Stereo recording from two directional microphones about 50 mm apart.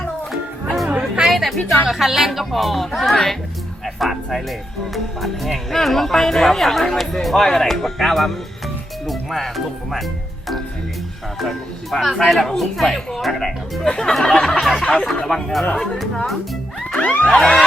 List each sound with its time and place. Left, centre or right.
0.3 s music: centre
0.9 s chatter: centre
1.3 s music: centre
1.9 s speech: centre
11.3 s speech: centre
14.8 s speech: centre
17.0 s a sound: left
17.3 s speech: centre